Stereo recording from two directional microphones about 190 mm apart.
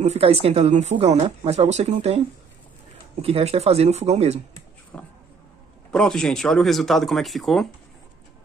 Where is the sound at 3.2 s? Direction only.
30° right (ahead or behind).